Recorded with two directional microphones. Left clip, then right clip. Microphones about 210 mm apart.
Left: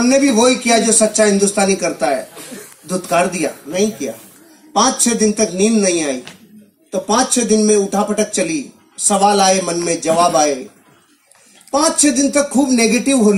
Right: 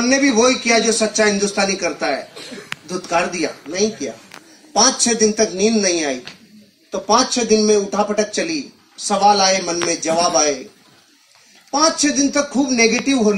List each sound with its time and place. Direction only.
0.0 s speech: 60° left (ahead or behind)
11.7 s speech: 60° left (ahead or behind)